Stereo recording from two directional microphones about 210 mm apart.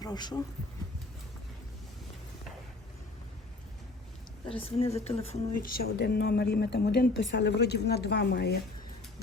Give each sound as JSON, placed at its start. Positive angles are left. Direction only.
{"t": 0.0, "sound": "speech", "side_deg": 20}
{"t": 4.4, "sound": "speech", "side_deg": 30}
{"t": 5.6, "sound": "a woman's voice", "side_deg": 45}